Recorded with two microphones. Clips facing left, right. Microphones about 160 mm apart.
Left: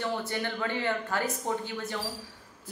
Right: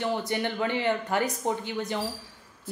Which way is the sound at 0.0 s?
20° right (ahead or behind).